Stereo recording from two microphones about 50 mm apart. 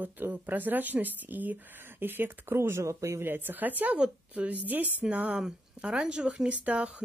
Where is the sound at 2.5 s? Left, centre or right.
Right.